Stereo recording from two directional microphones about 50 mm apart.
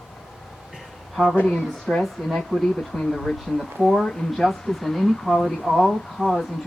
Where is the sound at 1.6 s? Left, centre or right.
Centre.